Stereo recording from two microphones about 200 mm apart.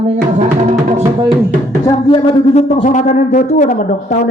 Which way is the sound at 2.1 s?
30° left (ahead or behind).